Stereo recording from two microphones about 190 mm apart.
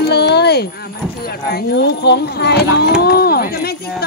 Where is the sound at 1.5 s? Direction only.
55° left (ahead or behind).